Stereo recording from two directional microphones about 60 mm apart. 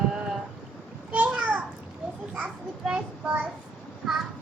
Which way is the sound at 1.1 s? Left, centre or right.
Right.